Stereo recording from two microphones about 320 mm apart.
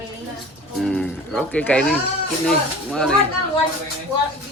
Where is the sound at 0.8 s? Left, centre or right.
Centre.